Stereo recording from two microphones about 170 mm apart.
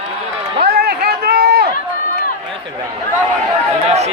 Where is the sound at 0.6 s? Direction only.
65° right (ahead or behind).